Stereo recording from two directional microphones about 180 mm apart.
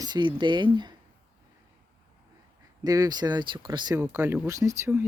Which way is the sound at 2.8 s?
20° right (ahead or behind).